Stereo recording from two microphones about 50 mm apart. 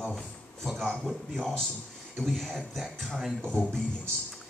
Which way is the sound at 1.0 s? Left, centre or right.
Centre.